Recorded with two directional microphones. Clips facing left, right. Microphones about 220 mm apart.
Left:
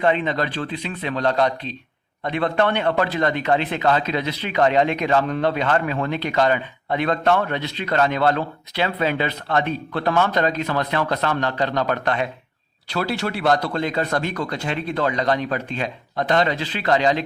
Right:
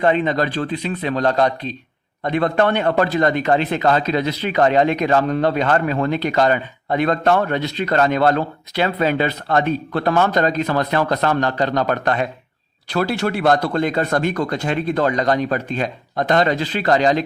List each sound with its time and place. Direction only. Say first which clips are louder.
0.0 s a man's voice: right 3 dB; 40° right (ahead or behind)